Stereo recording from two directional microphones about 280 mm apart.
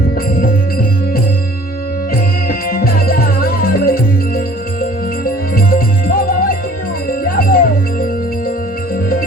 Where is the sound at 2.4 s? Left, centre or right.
Left.